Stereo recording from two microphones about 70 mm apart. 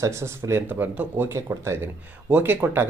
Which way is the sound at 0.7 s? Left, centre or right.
Right.